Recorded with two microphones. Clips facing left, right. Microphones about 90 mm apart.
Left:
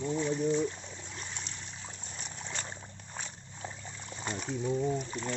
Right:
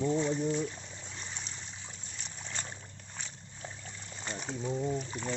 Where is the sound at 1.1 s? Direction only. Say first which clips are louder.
Even; centre (ahead or behind).